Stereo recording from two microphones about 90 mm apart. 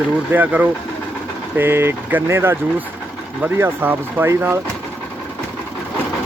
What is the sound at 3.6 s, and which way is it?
Speech, 25° right (ahead or behind).